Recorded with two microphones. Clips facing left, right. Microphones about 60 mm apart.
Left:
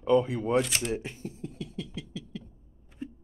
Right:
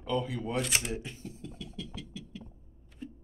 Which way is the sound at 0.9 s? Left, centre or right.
Left.